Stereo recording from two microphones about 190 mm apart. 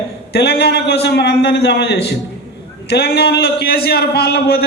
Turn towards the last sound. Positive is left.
turn(degrees=55)  # may be behind; listen again after turning